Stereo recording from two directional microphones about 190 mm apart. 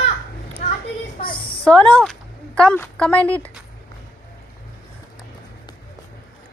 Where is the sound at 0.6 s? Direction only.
35° left (ahead or behind).